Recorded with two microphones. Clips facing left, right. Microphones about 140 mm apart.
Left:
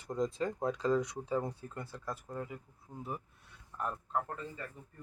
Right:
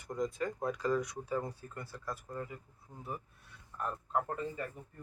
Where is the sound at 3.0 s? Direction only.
20° left (ahead or behind).